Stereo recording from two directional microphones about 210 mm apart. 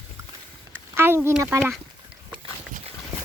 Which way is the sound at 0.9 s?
10° right (ahead or behind).